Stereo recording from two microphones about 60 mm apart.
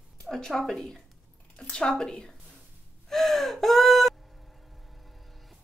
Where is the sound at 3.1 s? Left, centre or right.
Centre.